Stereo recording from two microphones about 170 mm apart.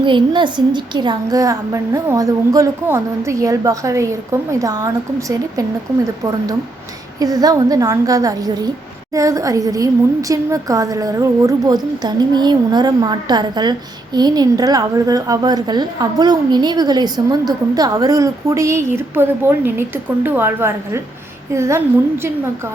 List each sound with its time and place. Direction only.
0.0 s a woman's voice: 30° right (ahead or behind)
7.2 s a woman's voice: 20° right (ahead or behind)